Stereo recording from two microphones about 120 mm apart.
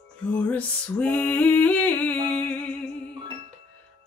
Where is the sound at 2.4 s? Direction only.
10° left (ahead or behind).